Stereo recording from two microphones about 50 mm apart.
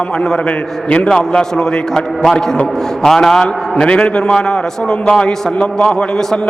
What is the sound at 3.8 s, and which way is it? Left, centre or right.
A man's voice, left.